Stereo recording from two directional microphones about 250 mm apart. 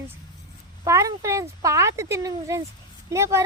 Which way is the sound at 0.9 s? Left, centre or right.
Centre.